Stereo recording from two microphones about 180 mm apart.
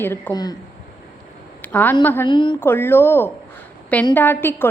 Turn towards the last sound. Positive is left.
turn(degrees=10)  # may be behind; listen again after turning